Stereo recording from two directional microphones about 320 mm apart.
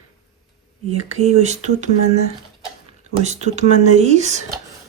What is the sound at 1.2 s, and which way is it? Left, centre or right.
Speech, right.